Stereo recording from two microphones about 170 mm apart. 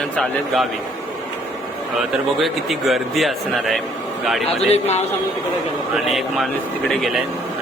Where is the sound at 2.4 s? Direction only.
Centre (ahead or behind).